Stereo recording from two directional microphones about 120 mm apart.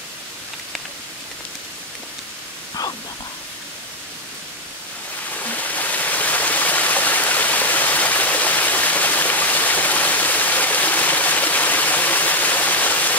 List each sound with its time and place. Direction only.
2.8 s static: 30° left (ahead or behind)
5.4 s stream: 15° left (ahead or behind)